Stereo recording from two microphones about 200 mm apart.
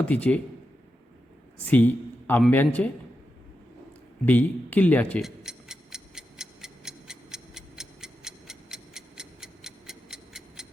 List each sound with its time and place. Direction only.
0.0 s speech: 5° left (ahead or behind)
1.6 s speech: 10° left (ahead or behind)
4.3 s tick-tock: 10° left (ahead or behind)